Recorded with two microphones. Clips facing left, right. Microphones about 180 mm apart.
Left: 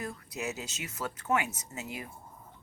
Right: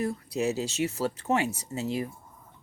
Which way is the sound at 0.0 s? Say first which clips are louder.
Right 9 dB; 30° right (ahead or behind).